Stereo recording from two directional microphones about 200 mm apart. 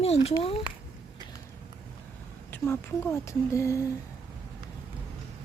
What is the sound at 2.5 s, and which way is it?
Speech, 10° left (ahead or behind).